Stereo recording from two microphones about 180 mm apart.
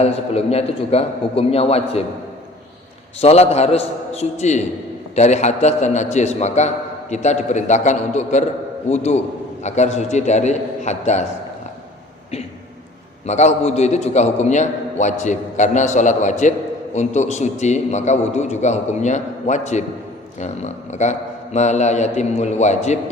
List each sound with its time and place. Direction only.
0.0 s a man's voice: 35° left (ahead or behind)
3.2 s a man's voice: 35° left (ahead or behind)
13.2 s a man's voice: 40° left (ahead or behind)